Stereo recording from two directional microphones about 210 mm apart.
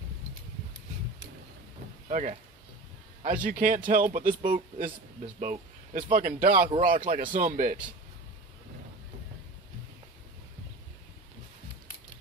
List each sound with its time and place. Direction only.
2.0 s a man's voice: 35° right (ahead or behind)